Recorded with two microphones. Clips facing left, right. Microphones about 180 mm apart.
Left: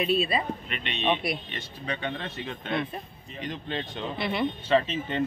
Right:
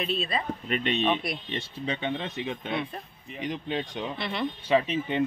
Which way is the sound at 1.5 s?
25° right (ahead or behind).